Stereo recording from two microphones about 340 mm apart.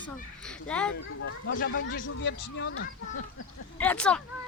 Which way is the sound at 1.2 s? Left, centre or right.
Left.